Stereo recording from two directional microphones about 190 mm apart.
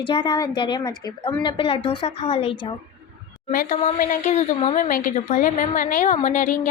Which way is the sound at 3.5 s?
45° left (ahead or behind).